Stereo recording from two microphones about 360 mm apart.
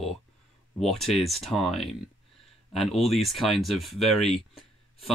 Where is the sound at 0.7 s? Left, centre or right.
Centre.